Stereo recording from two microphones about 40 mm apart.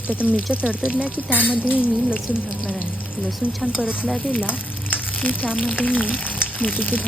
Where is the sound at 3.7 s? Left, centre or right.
Centre.